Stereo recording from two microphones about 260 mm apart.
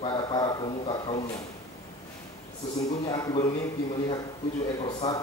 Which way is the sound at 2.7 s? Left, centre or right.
Centre.